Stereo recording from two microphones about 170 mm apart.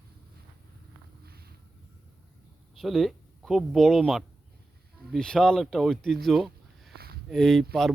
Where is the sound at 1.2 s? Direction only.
65° right (ahead or behind).